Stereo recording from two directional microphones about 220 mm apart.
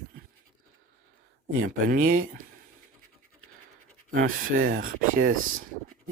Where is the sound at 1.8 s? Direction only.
40° right (ahead or behind).